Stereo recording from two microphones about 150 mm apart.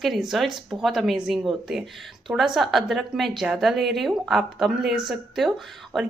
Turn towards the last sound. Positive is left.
turn(degrees=0)  # may be behind; listen again after turning